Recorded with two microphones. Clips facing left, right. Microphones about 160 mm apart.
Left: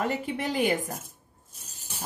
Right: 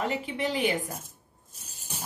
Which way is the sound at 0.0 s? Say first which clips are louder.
Left 1 dB; 45° left (ahead or behind).